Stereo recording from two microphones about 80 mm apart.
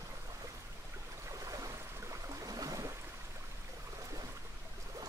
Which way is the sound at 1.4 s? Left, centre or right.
Right.